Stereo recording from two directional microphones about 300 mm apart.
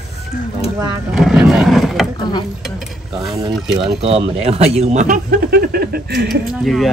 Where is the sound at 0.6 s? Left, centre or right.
Centre.